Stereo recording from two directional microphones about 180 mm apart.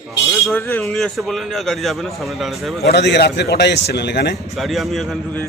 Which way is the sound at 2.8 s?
65° left (ahead or behind).